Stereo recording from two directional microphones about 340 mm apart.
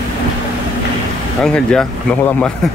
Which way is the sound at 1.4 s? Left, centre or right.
Centre.